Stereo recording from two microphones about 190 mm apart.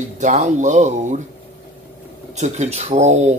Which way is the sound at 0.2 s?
40° right (ahead or behind).